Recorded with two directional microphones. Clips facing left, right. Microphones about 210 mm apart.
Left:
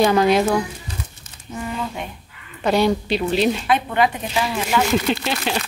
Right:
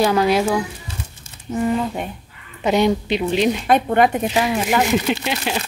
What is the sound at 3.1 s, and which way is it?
Chopping, 15° right (ahead or behind).